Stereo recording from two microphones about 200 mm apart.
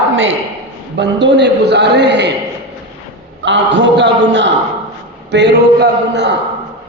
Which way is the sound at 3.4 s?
65° right (ahead or behind).